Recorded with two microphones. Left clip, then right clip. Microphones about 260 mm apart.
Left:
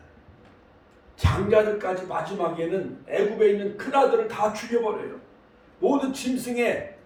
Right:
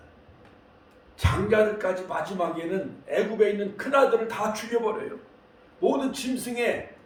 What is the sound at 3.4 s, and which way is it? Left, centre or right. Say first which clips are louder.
A man's voice: left 2 dB; centre.